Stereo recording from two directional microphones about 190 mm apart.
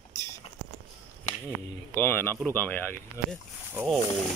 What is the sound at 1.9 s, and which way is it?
Speech, 10° left (ahead or behind).